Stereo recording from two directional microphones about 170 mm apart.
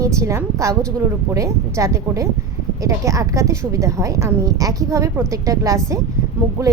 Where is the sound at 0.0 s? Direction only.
20° right (ahead or behind).